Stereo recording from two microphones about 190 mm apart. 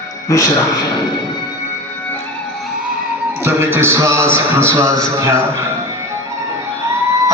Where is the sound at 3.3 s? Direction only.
10° right (ahead or behind).